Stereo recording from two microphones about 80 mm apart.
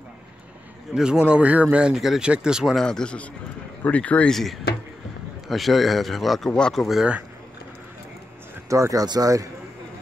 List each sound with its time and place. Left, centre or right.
0.9 s speech: centre
2.8 s speech: centre
4.3 s speech: centre
8.6 s speech: right
9.0 s speech: right